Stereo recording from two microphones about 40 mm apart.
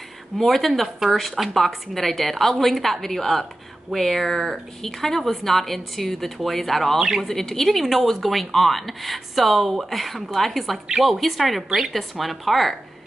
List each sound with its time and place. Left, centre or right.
0.4 s speech: centre
7.0 s speech: centre
7.2 s speech: centre